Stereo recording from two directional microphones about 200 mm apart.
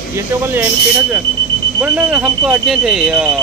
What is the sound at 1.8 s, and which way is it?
Speech, 5° right (ahead or behind).